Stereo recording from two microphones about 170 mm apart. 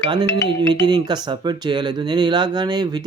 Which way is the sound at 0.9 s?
25° right (ahead or behind).